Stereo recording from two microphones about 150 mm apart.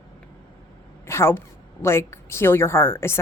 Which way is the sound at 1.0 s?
15° left (ahead or behind).